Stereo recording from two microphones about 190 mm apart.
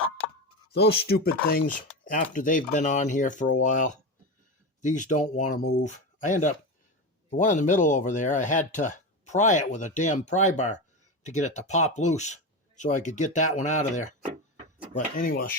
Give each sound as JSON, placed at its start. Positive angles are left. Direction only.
{"t": 0.7, "sound": "speech", "side_deg": 55}